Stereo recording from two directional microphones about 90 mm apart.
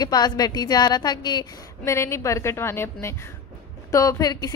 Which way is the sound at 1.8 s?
30° left (ahead or behind).